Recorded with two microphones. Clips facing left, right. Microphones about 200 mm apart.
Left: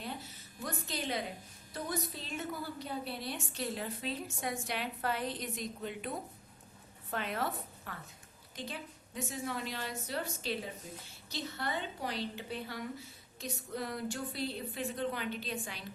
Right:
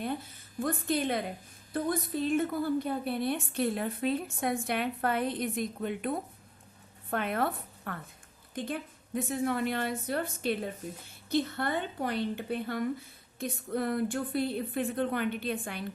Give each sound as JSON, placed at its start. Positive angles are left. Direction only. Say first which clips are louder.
{"t": 0.0, "sound": "a woman's voice", "louder": "right 8 dB", "side_deg": -55}